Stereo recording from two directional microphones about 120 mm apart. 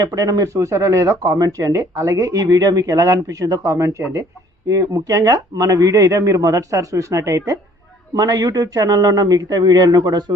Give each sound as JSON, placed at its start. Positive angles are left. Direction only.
{"t": 0.0, "sound": "speech", "side_deg": -35}